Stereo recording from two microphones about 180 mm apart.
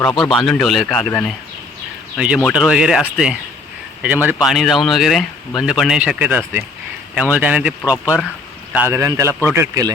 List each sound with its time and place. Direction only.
0.2 s speech: centre (ahead or behind)
2.1 s speech: 5° right (ahead or behind)